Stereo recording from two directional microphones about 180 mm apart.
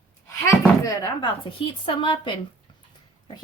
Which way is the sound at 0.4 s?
20° left (ahead or behind).